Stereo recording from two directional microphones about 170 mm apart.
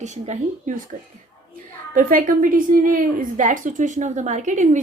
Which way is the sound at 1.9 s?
55° right (ahead or behind).